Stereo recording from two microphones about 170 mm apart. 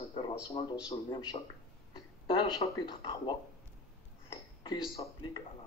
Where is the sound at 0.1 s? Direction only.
30° left (ahead or behind).